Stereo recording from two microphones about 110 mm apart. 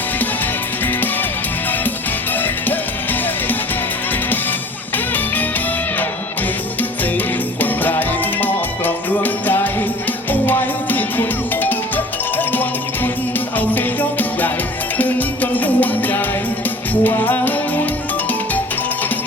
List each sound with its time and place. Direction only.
2.4 s music: 15° left (ahead or behind)
7.6 s music: 15° left (ahead or behind)